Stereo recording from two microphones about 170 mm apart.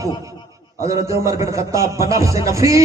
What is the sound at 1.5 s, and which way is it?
A man's voice, 15° right (ahead or behind).